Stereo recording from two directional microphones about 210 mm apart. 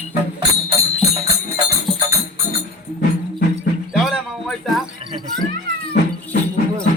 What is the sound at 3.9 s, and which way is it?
Music, centre (ahead or behind).